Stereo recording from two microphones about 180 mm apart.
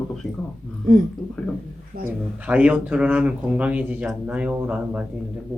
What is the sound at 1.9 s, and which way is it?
Speech, 55° right (ahead or behind).